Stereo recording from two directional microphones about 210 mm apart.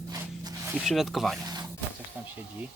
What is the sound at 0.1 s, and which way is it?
Zipper, 15° right (ahead or behind).